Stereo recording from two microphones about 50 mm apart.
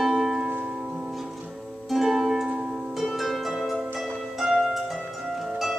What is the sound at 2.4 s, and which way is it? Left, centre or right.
Music, right.